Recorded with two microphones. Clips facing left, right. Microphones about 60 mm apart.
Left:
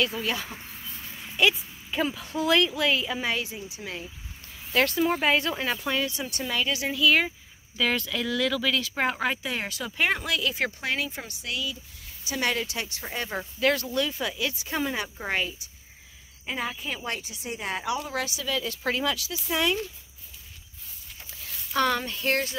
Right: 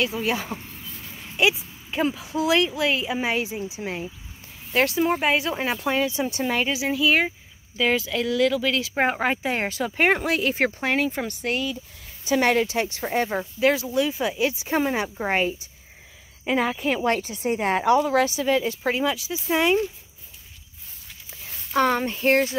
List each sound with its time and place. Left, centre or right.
0.2 s speech: right
1.9 s speech: centre
3.2 s speech: right
4.7 s a woman's voice: centre
5.9 s speech: right
6.7 s speech: centre; by 13.3 s right
13.3 s speech: centre; by 15.7 s right
16.4 s speech: right
18.2 s speech: right
18.8 s speech: centre
21.3 s speech: right